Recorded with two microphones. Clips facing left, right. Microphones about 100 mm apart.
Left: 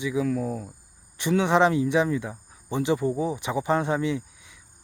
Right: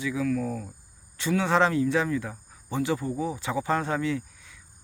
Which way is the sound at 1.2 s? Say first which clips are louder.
Left 2 dB; 20° left (ahead or behind).